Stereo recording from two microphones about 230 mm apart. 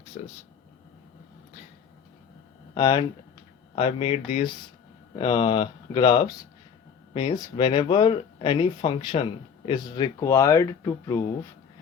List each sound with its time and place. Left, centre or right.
0.2 s speech: left
2.7 s speech: left